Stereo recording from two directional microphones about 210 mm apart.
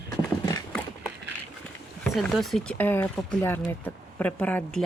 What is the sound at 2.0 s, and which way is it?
Speech, centre (ahead or behind).